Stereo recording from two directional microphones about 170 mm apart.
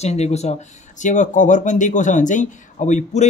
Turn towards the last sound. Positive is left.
turn(degrees=45)  # may be behind; listen again after turning